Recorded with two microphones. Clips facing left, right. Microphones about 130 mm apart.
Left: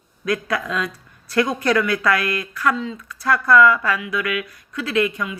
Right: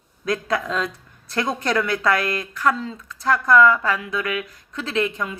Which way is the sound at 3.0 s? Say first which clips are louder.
Even; 25° right (ahead or behind).